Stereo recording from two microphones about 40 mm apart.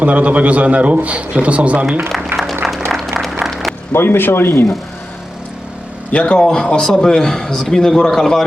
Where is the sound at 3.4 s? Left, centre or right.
Centre.